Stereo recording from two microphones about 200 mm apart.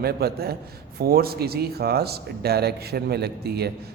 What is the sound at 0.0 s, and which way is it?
A man's voice, 50° right (ahead or behind).